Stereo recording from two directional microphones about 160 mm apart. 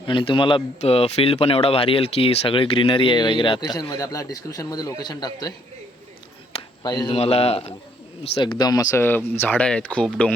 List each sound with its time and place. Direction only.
0.0 s a man's voice: 30° left (ahead or behind)
6.6 s a sound: 25° left (ahead or behind)
7.2 s speech: 40° left (ahead or behind)
8.4 s speech: 25° left (ahead or behind); by 10.3 s 5° left (ahead or behind)